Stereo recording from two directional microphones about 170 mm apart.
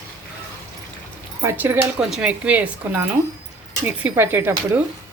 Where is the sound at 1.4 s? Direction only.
10° right (ahead or behind).